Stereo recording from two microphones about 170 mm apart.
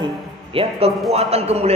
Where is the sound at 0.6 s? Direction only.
35° right (ahead or behind).